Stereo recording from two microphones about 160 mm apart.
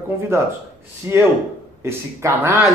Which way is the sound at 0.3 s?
15° right (ahead or behind).